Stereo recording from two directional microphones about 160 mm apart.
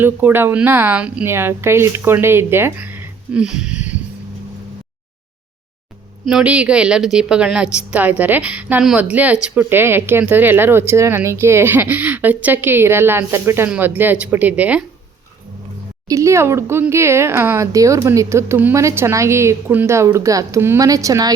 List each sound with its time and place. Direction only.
0.0 s a woman's voice: 15° right (ahead or behind)
6.2 s a woman's voice: 5° right (ahead or behind)
16.0 s a woman's voice: 20° right (ahead or behind)